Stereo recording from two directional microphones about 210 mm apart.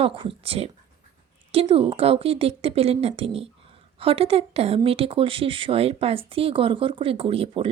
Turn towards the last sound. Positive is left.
turn(degrees=-25)  # may be behind; listen again after turning